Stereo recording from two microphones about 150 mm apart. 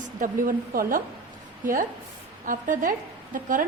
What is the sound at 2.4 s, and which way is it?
A woman's voice, 65° right (ahead or behind).